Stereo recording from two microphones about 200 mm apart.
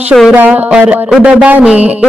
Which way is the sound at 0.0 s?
Centre (ahead or behind).